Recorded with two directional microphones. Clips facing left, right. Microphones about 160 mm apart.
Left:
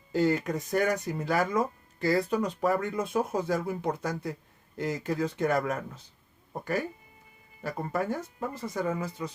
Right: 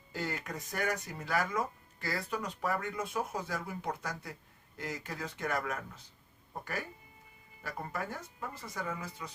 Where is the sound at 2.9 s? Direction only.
40° left (ahead or behind).